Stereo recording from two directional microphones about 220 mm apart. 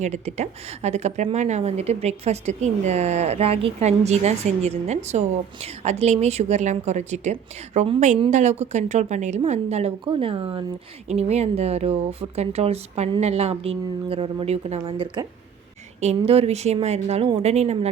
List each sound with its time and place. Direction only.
0.0 s a woman's voice: 30° right (ahead or behind)